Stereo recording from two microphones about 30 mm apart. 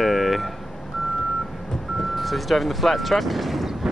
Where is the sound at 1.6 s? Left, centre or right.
Centre.